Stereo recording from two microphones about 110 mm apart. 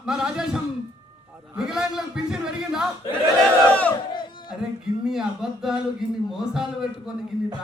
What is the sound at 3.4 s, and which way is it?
Crowd, 10° left (ahead or behind).